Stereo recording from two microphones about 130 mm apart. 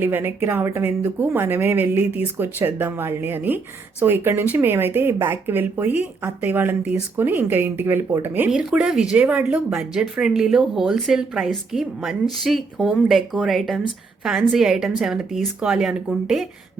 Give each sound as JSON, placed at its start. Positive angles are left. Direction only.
{"t": 0.0, "sound": "a woman's voice", "side_deg": -15}